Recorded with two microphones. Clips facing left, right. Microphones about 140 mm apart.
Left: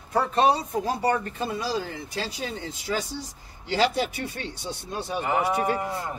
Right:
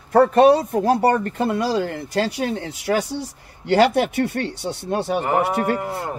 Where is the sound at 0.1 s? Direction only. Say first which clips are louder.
Right 9 dB; 55° right (ahead or behind).